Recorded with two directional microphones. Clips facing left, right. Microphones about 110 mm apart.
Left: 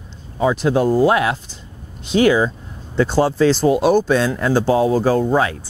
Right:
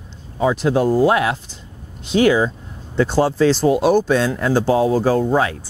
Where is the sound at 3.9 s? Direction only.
25° left (ahead or behind).